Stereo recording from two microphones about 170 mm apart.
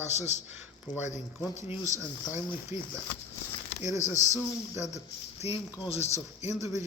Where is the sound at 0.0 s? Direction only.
40° left (ahead or behind).